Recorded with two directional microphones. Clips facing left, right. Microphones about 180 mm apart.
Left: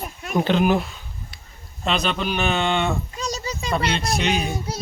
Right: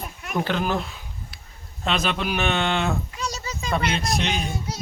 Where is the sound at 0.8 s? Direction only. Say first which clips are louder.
Left 2 dB; centre (ahead or behind).